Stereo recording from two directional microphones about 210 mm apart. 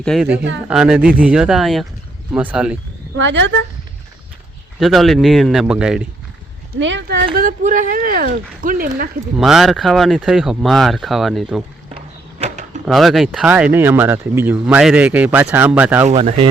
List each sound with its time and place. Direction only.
0.0 s speech: centre (ahead or behind)
3.2 s a woman's voice: 60° right (ahead or behind)
4.8 s speech: centre (ahead or behind)
6.7 s a woman's voice: 60° right (ahead or behind)
7.3 s speech: 40° right (ahead or behind)
9.4 s speech: centre (ahead or behind)
11.9 s a sound: 30° right (ahead or behind)
12.8 s speech: centre (ahead or behind)
16.0 s speech: 30° right (ahead or behind)